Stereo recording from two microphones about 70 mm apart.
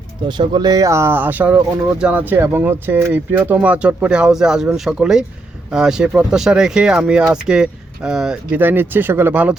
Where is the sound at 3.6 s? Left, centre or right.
Centre.